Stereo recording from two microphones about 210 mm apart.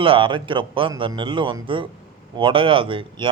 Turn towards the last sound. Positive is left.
turn(degrees=-25)  # may be behind; listen again after turning